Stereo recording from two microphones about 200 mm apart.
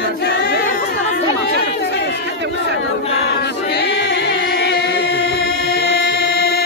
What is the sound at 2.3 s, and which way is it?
Crowd, 60° right (ahead or behind).